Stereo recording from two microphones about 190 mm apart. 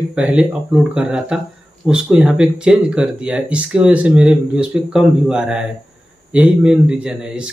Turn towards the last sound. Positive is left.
turn(degrees=-5)  # may be behind; listen again after turning